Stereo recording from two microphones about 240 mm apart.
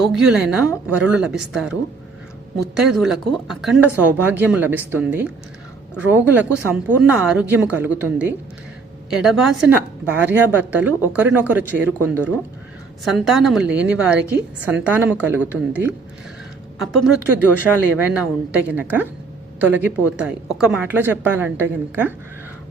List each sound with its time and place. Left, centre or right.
0.0 s a woman's voice: centre